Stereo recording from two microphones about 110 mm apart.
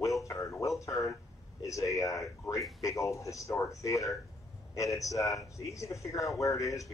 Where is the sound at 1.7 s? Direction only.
30° left (ahead or behind).